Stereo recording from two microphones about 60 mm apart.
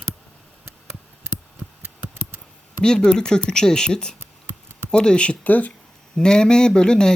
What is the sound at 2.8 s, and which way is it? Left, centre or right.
Speech, centre.